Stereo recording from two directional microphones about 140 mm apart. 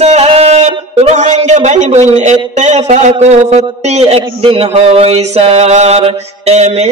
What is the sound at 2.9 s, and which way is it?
Music, 55° right (ahead or behind).